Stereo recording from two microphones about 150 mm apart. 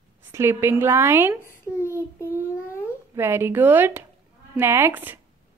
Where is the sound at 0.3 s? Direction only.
15° right (ahead or behind).